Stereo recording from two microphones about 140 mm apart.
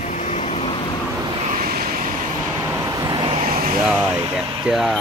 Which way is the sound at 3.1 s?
40° right (ahead or behind).